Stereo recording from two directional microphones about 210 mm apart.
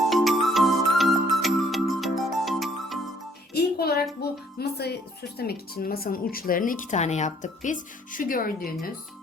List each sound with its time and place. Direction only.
0.1 s music: centre (ahead or behind)
3.5 s music: 50° left (ahead or behind)
4.2 s speech: 50° left (ahead or behind)